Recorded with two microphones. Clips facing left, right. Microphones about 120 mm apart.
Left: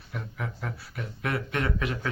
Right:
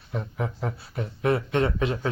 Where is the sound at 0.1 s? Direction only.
30° right (ahead or behind).